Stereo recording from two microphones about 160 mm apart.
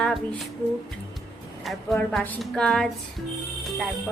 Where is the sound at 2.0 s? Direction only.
10° left (ahead or behind).